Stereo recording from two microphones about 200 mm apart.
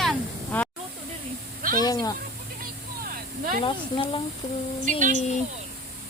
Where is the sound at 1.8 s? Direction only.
20° left (ahead or behind).